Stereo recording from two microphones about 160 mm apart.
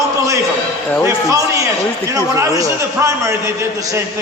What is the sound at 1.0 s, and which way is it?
A man's voice, 20° right (ahead or behind).